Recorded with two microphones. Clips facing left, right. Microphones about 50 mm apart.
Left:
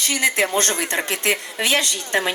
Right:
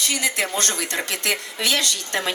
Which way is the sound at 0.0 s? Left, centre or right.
Left.